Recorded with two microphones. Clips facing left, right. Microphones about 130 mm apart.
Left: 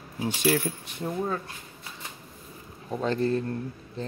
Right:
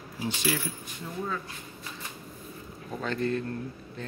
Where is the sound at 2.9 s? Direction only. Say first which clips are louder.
Left 4 dB; 30° left (ahead or behind).